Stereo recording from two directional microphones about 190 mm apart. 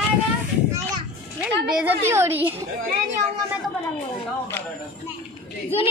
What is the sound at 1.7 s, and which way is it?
Speech, 5° right (ahead or behind).